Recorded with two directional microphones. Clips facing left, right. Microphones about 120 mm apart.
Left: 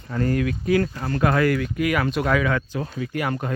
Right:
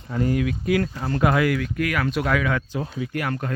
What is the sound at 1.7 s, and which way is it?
Speech, 5° left (ahead or behind).